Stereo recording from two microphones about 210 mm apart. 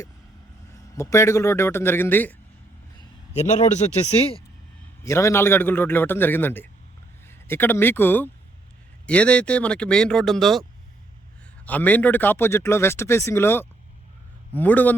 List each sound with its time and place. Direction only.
0.9 s speech: 15° left (ahead or behind)
4.0 s speech: 30° left (ahead or behind)
5.0 s speech: 15° left (ahead or behind)